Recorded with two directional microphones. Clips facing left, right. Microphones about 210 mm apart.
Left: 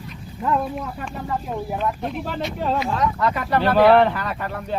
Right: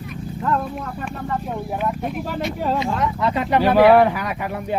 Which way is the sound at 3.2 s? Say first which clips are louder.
Right 5 dB; 25° right (ahead or behind).